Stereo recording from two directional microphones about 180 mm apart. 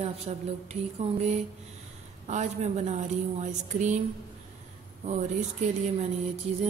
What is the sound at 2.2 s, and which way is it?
Speech, 40° right (ahead or behind).